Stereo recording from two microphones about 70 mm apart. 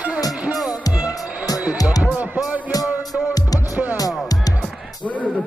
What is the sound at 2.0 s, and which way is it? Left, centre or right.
Music, right.